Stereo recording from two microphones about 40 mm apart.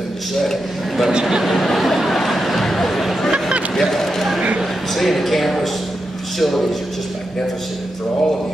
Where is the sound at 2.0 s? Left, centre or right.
Centre.